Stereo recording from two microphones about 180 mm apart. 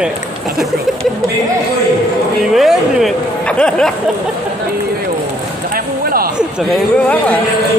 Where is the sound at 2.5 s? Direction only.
Centre (ahead or behind).